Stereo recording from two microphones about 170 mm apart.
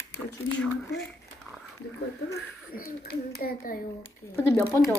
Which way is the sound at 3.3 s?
60° left (ahead or behind).